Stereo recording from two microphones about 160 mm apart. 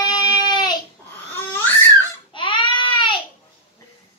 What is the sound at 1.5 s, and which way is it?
Crying, 15° left (ahead or behind).